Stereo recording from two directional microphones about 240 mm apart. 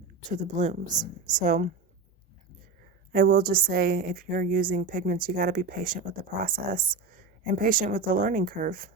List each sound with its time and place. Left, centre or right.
0.3 s a woman's voice: right
3.1 s a woman's voice: right